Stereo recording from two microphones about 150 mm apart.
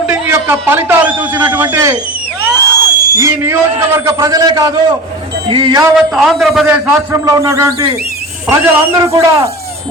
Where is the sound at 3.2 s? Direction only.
20° right (ahead or behind).